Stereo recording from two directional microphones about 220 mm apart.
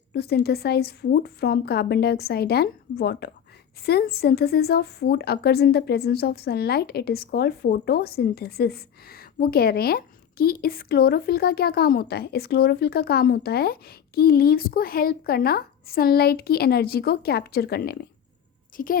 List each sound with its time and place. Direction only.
0.1 s a woman's voice: 45° left (ahead or behind)